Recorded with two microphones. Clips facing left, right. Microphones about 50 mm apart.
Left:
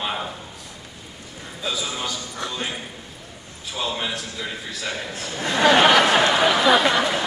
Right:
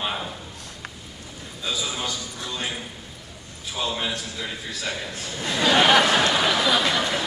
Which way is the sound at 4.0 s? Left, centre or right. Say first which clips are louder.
Left 1 dB; centre.